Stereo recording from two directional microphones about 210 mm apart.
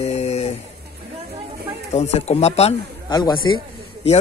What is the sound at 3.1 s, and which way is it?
Speech, 20° left (ahead or behind).